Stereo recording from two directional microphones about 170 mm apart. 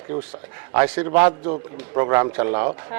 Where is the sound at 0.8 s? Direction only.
10° right (ahead or behind).